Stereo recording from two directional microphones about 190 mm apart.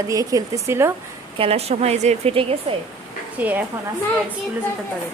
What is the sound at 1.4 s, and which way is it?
A woman's voice, 30° right (ahead or behind).